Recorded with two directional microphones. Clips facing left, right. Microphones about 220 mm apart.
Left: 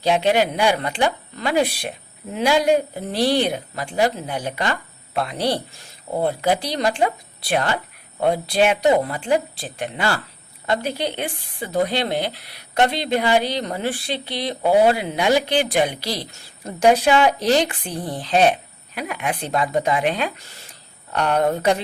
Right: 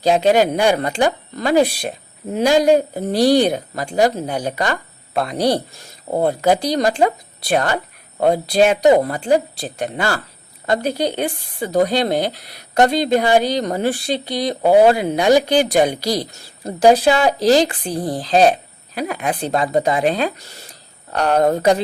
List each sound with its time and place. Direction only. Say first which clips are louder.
0.0 s speech: right 4 dB; 40° right (ahead or behind)